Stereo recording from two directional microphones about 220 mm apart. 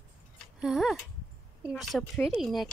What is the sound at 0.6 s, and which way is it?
A woman's voice, centre (ahead or behind).